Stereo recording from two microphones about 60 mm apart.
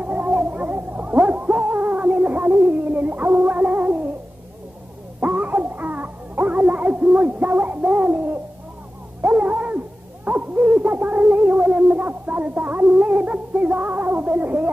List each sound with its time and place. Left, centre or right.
0.0 s music: right
5.2 s music: right
9.2 s dog: right
10.2 s a sound: right